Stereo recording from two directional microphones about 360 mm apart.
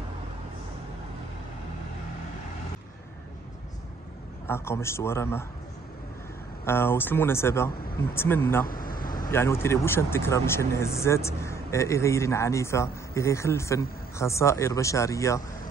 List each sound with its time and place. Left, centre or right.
4.5 s speech: centre
6.6 s speech: centre
8.6 s vehicle: left
9.1 s speech: centre